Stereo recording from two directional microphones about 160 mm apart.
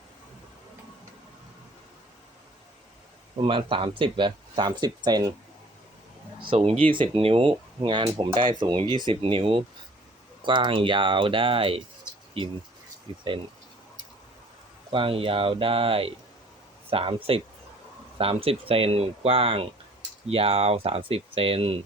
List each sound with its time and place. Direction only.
3.3 s speech: 35° right (ahead or behind)
6.4 s speech: 35° right (ahead or behind)
14.8 s speech: 35° right (ahead or behind)